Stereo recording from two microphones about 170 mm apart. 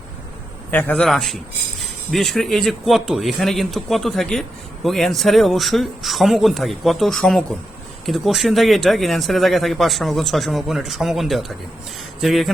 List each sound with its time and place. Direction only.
0.7 s speech: 10° left (ahead or behind)